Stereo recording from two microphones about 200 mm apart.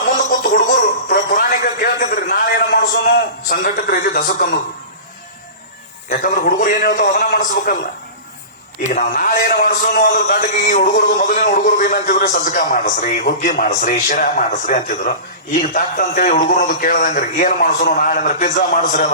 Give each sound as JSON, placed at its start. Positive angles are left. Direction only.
{"t": 0.0, "sound": "music", "side_deg": 45}
{"t": 3.5, "sound": "a man's voice", "side_deg": 45}
{"t": 6.1, "sound": "a man's voice", "side_deg": 45}
{"t": 8.8, "sound": "a man's voice", "side_deg": 40}